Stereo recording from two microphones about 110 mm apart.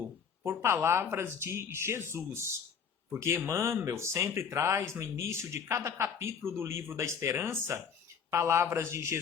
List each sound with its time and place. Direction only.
0.4 s speech: 20° right (ahead or behind)